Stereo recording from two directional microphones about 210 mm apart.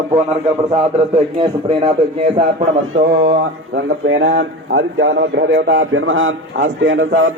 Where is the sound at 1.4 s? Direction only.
30° right (ahead or behind).